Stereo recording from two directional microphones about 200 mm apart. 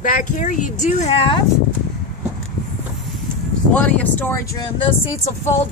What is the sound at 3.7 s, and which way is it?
Speech, 5° left (ahead or behind).